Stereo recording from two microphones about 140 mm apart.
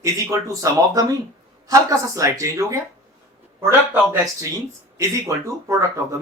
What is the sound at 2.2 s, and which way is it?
Speech, 20° right (ahead or behind).